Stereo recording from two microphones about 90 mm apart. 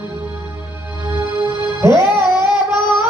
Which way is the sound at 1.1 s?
55° left (ahead or behind).